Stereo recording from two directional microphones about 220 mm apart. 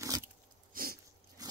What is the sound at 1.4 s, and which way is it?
Biting, 15° right (ahead or behind).